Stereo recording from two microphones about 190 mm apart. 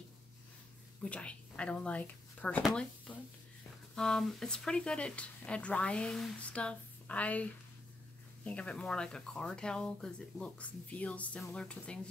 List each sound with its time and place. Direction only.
1.0 s speech: 5° left (ahead or behind)
8.5 s speech: 5° left (ahead or behind)